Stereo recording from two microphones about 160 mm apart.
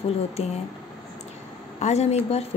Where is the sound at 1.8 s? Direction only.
40° left (ahead or behind).